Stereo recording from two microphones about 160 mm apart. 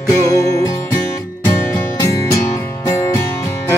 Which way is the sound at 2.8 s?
20° left (ahead or behind).